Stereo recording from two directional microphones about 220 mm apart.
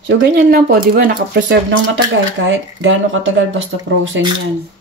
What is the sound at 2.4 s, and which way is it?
Speech, 60° right (ahead or behind).